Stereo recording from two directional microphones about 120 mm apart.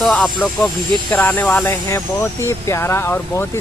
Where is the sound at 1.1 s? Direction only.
15° left (ahead or behind).